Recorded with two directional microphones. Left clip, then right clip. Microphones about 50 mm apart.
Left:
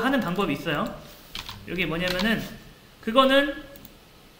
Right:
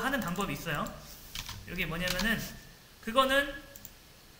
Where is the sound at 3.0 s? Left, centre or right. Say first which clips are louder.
Left 7 dB; right.